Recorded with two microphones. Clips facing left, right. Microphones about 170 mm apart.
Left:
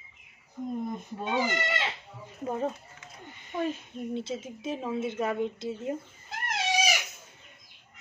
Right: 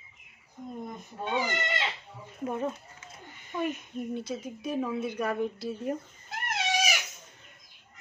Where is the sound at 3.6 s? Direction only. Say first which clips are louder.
Right 2 dB; 25° left (ahead or behind).